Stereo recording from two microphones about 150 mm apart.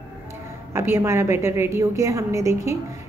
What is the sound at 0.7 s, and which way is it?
A woman's voice, 15° right (ahead or behind).